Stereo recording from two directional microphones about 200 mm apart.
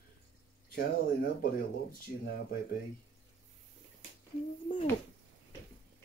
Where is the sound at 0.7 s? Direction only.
50° left (ahead or behind).